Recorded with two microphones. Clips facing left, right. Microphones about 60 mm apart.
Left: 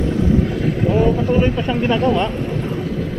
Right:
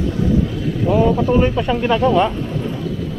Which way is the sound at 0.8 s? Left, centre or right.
Centre.